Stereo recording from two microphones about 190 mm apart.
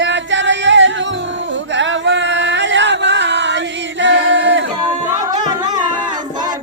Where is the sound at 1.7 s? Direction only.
75° right (ahead or behind).